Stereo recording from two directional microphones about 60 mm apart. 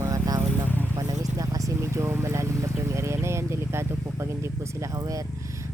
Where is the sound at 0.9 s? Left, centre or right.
Right.